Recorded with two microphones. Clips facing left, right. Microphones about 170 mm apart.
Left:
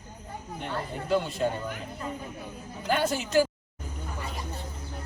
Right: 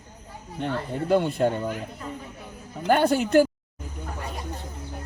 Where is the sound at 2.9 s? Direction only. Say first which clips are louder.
Right 7 dB; 55° right (ahead or behind).